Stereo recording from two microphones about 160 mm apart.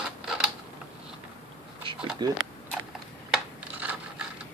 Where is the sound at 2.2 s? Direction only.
25° right (ahead or behind).